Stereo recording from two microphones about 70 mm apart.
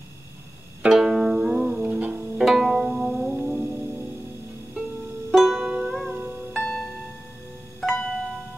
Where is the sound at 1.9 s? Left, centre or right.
Right.